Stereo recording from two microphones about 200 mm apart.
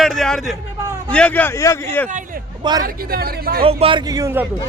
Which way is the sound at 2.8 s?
50° right (ahead or behind).